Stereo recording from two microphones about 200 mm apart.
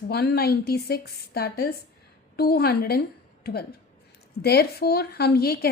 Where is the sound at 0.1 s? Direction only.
50° left (ahead or behind).